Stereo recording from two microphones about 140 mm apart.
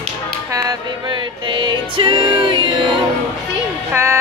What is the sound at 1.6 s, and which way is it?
Music, 35° right (ahead or behind).